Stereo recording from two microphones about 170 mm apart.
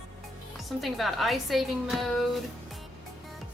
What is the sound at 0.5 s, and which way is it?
Speech, centre (ahead or behind).